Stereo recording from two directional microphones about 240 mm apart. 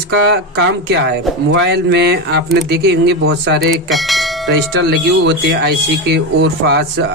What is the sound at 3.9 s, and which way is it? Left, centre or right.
Speech, centre.